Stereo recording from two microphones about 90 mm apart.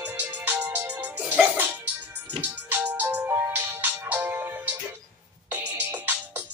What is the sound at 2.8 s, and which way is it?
Music, 20° right (ahead or behind).